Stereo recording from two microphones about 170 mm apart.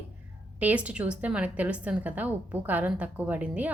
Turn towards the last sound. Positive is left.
turn(degrees=-10)  # may be behind; listen again after turning